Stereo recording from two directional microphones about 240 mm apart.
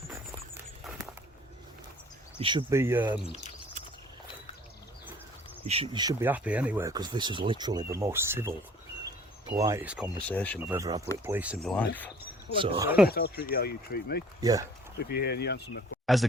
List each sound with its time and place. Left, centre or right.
0.1 s a sound: centre
2.4 s speech: centre
3.2 s speech: left
5.6 s speech: right; by 10.1 s centre
10.2 s speech: centre
10.7 s speech: centre
12.6 s speech: right
13.1 s speech: left
14.4 s speech: centre
14.9 s speech: left